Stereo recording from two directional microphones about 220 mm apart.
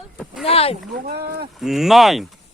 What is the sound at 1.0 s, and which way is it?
Speech, 45° right (ahead or behind).